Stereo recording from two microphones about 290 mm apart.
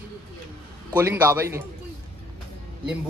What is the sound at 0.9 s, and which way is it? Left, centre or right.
Speech, centre.